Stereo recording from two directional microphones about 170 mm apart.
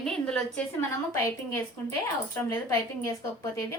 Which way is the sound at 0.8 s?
15° left (ahead or behind).